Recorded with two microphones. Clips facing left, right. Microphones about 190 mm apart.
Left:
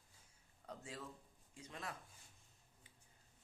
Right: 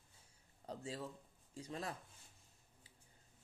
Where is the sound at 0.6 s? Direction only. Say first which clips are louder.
Right 5 dB; 30° right (ahead or behind).